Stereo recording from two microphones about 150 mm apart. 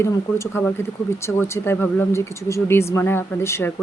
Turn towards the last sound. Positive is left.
turn(degrees=15)  # may be behind; listen again after turning